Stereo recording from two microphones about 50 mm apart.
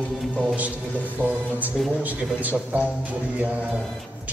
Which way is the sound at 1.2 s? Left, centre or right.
Right.